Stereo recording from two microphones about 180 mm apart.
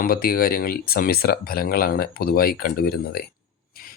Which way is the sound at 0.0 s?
55° left (ahead or behind).